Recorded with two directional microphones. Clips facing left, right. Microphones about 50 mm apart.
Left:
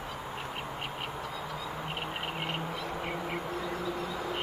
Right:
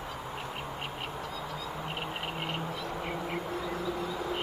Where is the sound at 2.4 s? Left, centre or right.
Centre.